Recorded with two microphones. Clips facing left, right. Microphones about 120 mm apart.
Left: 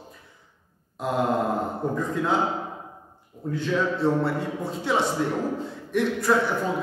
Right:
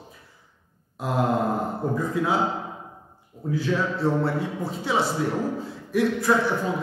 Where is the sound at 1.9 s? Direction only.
5° right (ahead or behind).